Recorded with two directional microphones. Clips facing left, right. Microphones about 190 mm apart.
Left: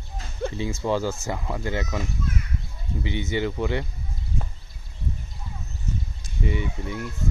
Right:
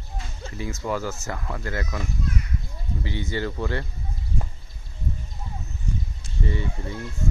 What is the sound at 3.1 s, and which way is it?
Speech, 20° left (ahead or behind).